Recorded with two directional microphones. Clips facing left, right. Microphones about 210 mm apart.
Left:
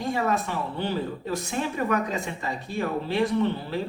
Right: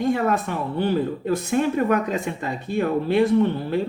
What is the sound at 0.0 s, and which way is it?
Speech, 55° right (ahead or behind).